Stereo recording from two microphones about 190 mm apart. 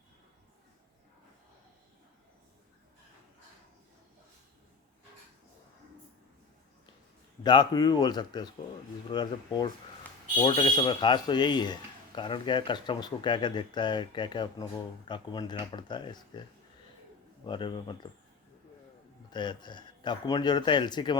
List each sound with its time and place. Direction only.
7.4 s speech: 20° left (ahead or behind)
17.4 s speech: 25° left (ahead or behind)
19.3 s speech: 25° left (ahead or behind)